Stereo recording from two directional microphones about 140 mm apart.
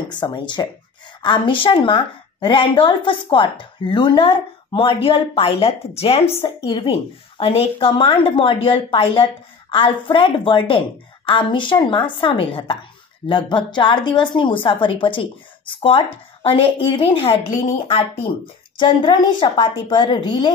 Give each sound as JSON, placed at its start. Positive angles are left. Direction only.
{"t": 0.1, "sound": "a woman's voice", "side_deg": 35}
{"t": 18.8, "sound": "speech", "side_deg": 35}